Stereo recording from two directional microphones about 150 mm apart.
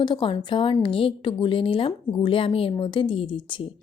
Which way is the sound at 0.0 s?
35° left (ahead or behind).